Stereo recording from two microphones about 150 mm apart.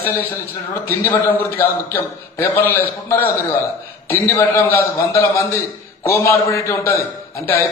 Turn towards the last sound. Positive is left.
turn(degrees=20)  # may be behind; listen again after turning